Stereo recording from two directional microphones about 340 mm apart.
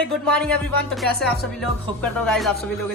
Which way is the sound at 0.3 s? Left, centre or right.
Centre.